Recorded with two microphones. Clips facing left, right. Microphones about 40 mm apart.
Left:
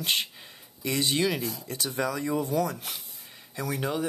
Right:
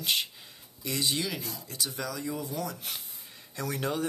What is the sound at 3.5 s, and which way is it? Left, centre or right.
Speech, centre.